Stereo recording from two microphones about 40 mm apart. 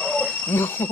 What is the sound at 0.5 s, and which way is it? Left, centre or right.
Speech, left.